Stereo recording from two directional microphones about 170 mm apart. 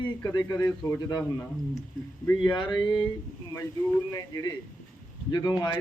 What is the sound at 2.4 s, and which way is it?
Speech, 30° left (ahead or behind).